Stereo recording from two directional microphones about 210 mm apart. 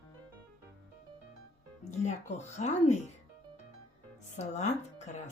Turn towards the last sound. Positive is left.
turn(degrees=35)  # may be behind; listen again after turning